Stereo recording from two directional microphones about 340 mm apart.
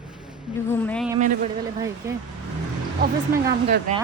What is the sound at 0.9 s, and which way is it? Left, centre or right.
Speech, centre.